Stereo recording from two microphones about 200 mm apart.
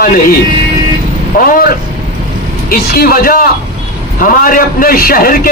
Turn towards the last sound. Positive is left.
turn(degrees=45)  # may be behind; listen again after turning